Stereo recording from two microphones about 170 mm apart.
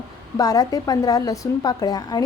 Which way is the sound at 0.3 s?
20° left (ahead or behind).